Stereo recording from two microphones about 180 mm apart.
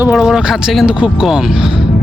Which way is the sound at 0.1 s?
Centre (ahead or behind).